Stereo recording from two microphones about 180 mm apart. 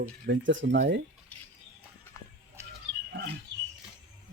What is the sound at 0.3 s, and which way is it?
Speech, 90° right.